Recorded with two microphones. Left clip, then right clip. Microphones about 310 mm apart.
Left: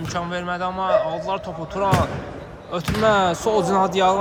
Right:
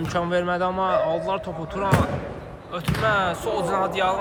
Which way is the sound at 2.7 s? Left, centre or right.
Centre.